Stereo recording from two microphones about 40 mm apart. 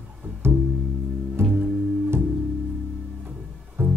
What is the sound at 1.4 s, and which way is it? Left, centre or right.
Music, right.